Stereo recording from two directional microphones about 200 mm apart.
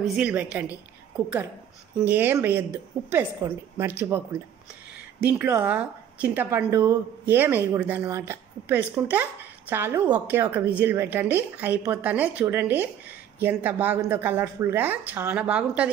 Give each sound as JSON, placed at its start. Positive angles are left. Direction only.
{"t": 0.0, "sound": "a woman's voice", "side_deg": -5}